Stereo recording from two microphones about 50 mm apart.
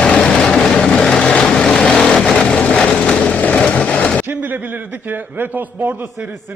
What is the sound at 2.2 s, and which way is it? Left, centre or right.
Vehicle, centre.